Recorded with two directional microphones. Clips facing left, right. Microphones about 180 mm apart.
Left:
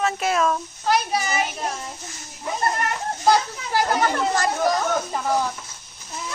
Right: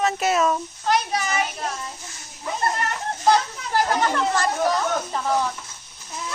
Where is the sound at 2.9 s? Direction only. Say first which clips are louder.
Even; 10° left (ahead or behind).